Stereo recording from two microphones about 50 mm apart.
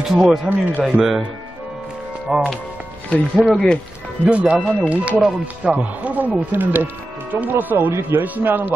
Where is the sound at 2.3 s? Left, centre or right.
Centre.